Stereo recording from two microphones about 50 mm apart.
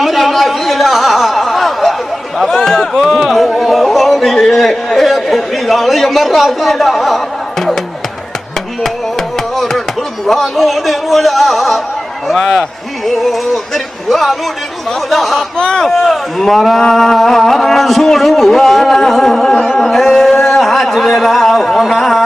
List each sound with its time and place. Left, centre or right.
0.0 s a sound: centre
4.5 s a man's voice: centre
9.6 s chopping: centre
10.4 s a man's voice: centre
15.5 s speech: centre
15.9 s a man's voice: centre
19.8 s a sound: centre